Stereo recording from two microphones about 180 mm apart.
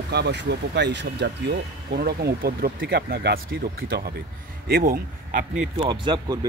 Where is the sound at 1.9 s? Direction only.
60° right (ahead or behind).